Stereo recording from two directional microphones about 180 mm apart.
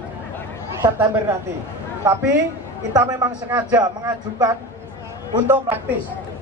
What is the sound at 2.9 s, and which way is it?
A man's voice, 20° right (ahead or behind).